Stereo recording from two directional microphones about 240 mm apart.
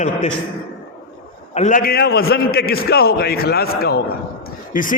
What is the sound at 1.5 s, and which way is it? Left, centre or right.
A man's voice, left.